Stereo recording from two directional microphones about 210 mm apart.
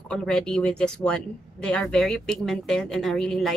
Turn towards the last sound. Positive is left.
turn(degrees=0)  # may be behind; listen again after turning